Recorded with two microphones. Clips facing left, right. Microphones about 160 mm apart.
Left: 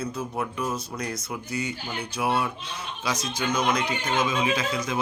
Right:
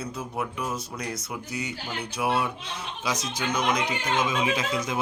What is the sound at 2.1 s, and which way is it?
Speech, 15° right (ahead or behind).